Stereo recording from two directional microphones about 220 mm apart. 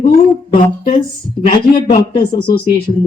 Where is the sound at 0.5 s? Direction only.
25° left (ahead or behind).